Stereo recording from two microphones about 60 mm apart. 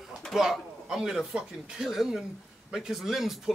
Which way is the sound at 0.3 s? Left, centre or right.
Centre.